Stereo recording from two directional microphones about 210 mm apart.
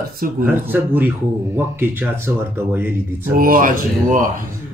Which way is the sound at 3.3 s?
40° right (ahead or behind).